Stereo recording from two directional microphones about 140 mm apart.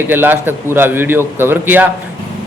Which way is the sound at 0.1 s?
15° right (ahead or behind).